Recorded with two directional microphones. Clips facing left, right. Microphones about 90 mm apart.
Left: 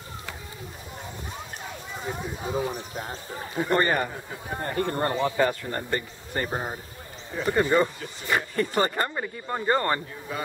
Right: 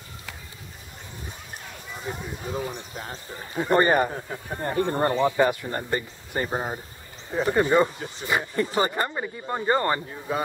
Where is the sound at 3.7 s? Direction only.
20° right (ahead or behind).